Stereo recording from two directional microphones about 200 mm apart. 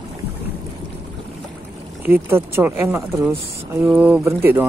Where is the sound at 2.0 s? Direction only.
10° right (ahead or behind).